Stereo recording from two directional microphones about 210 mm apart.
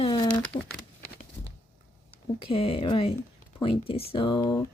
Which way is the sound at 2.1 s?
25° left (ahead or behind).